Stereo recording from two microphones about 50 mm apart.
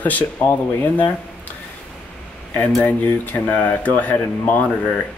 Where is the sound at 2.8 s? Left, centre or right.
Left.